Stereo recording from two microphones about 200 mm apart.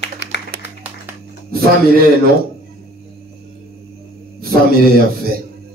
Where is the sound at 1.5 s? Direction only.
50° right (ahead or behind).